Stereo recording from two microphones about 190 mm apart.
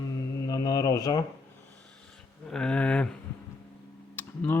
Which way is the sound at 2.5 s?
5° left (ahead or behind).